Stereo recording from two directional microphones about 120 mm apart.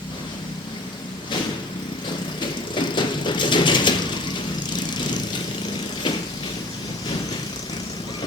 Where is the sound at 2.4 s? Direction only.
40° left (ahead or behind).